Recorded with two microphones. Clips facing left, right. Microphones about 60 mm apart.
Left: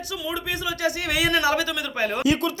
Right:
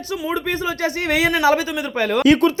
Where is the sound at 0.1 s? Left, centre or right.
Right.